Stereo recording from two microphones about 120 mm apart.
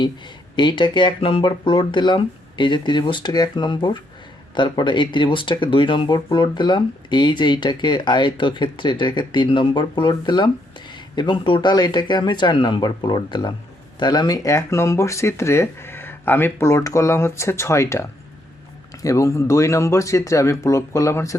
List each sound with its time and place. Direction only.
0.5 s speech: 40° left (ahead or behind)